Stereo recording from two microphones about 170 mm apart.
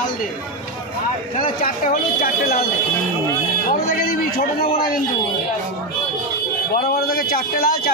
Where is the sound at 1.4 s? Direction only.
55° left (ahead or behind).